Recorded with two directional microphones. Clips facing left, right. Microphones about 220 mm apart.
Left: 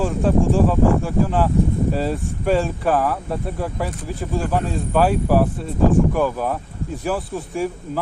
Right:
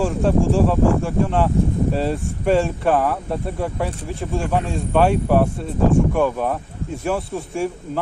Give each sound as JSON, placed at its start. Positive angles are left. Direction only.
{"t": 0.0, "sound": "speech", "side_deg": 0}